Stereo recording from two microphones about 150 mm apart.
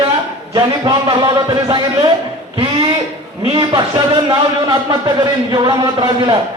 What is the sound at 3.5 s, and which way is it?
Speech, 30° right (ahead or behind).